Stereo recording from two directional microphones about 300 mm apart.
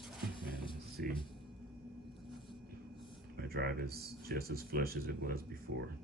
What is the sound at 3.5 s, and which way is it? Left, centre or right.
Speech, right.